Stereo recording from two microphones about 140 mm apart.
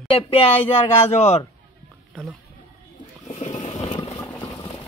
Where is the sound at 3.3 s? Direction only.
50° left (ahead or behind).